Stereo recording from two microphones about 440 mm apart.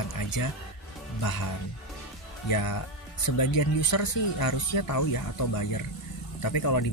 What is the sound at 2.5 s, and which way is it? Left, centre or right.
Speech, left.